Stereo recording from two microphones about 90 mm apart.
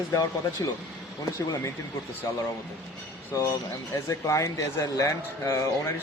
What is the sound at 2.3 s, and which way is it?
Speech, 40° left (ahead or behind).